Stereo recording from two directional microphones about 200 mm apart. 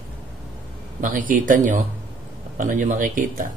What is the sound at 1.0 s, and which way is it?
A man's voice, 40° right (ahead or behind).